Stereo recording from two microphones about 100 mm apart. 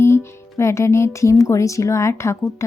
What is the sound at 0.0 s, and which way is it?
Speech, 25° left (ahead or behind).